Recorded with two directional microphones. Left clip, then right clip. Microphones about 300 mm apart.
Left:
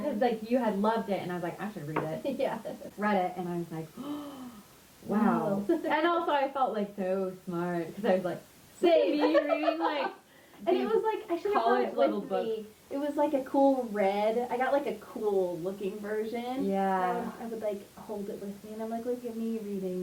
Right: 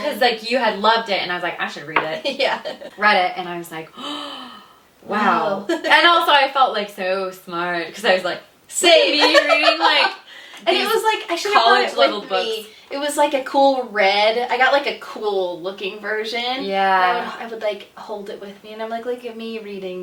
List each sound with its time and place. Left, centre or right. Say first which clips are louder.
0.0 s a woman's voice: right 11 dB; centre
13.5 s speech: right 9 dB; right
13.9 s speech: right 12 dB; centre; by 15.7 s right
15.8 s speech: right 12 dB; centre
18.8 s speech: right 10 dB; centre